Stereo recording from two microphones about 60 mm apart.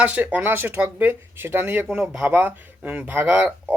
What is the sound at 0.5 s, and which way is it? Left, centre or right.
A man's voice, right.